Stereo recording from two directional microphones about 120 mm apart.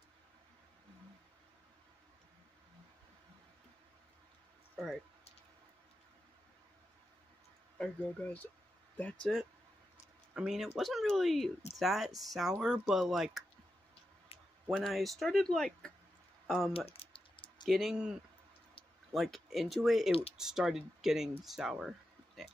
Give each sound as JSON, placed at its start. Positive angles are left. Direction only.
{"t": 4.7, "sound": "a sound", "side_deg": 0}
{"t": 7.8, "sound": "speech", "side_deg": 15}
{"t": 9.2, "sound": "speech", "side_deg": 0}
{"t": 14.3, "sound": "a sound", "side_deg": 50}
{"t": 14.7, "sound": "speech", "side_deg": 0}
{"t": 16.9, "sound": "typing", "side_deg": 50}
{"t": 17.6, "sound": "speech", "side_deg": 0}
{"t": 19.1, "sound": "speech", "side_deg": 0}